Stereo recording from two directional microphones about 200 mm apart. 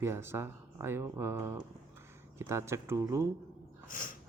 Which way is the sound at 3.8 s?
45° left (ahead or behind).